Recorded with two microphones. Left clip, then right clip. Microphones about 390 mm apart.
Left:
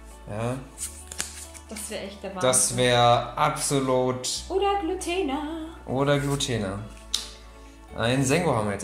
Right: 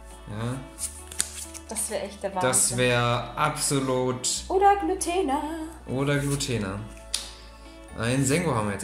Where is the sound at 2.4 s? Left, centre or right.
Centre.